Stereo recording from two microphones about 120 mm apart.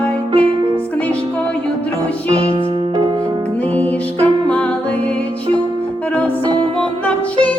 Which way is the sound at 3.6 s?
10° left (ahead or behind).